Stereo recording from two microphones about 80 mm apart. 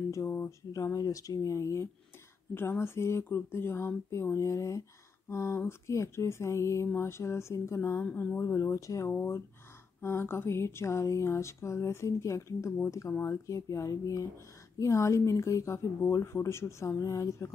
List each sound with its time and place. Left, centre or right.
0.1 s speech: left
0.7 s speech: left
8.0 s speech: centre
8.4 s speech: left
9.1 s speech: left